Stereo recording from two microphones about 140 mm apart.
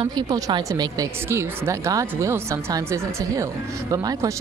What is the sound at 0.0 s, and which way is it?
Speech, 30° right (ahead or behind).